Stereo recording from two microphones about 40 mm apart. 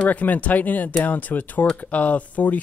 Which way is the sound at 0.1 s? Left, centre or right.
Left.